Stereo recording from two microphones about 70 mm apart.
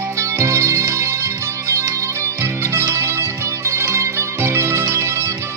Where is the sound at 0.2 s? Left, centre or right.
Right.